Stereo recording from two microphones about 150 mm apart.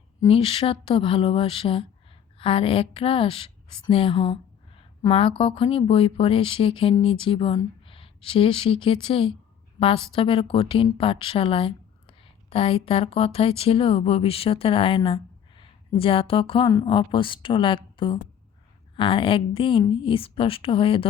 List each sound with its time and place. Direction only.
0.3 s speech: 40° left (ahead or behind)